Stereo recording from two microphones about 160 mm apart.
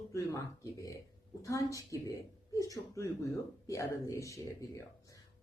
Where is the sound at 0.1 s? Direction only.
20° left (ahead or behind).